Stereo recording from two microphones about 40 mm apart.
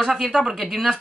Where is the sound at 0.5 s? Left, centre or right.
Centre.